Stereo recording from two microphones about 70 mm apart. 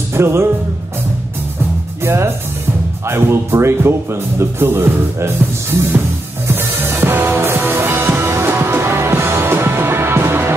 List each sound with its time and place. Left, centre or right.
0.1 s music: right
2.0 s speech: right
6.4 s music: right